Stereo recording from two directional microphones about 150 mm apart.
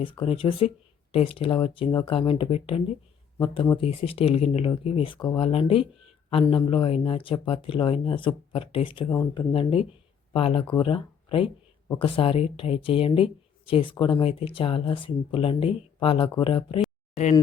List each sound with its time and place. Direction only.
0.0 s speech: 35° left (ahead or behind)
9.0 s speech: 20° left (ahead or behind)
9.5 s speech: 35° left (ahead or behind)